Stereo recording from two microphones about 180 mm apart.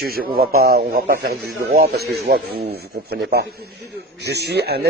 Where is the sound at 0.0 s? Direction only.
55° right (ahead or behind).